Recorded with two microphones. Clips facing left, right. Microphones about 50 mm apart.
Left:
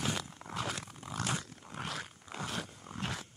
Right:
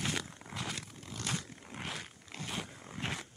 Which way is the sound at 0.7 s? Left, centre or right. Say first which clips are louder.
Left 4 dB; centre.